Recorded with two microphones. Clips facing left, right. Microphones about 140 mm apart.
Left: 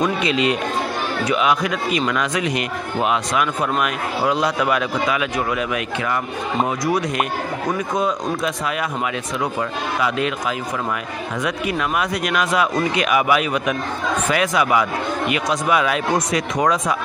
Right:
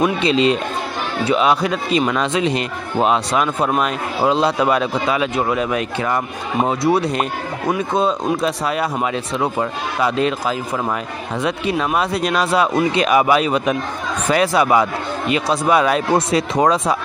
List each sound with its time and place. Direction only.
0.0 s a man's voice: 30° right (ahead or behind)